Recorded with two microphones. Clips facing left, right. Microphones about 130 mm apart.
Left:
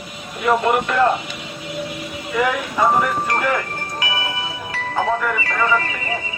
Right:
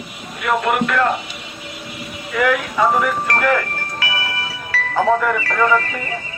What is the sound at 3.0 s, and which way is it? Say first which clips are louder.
Speech: right 1 dB; 5° left (ahead or behind).